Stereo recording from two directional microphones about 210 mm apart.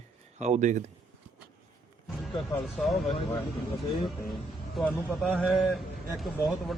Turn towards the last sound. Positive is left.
turn(degrees=0)  # may be behind; listen again after turning